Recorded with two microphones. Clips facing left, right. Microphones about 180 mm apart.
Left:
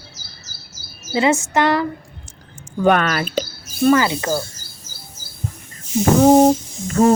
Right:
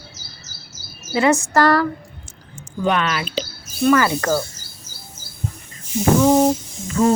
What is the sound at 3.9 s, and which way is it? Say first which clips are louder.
Speech: even; 20° left (ahead or behind).